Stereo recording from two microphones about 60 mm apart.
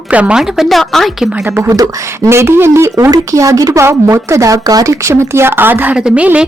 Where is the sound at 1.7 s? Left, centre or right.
Right.